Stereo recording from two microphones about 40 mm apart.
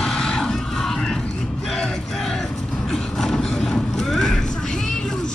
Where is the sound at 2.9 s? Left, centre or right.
Centre.